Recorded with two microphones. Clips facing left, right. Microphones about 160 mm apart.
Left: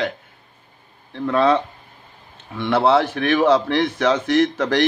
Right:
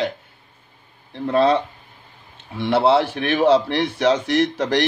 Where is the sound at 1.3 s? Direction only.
30° right (ahead or behind).